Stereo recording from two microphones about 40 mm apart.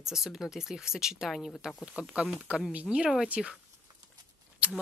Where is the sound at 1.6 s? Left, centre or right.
Right.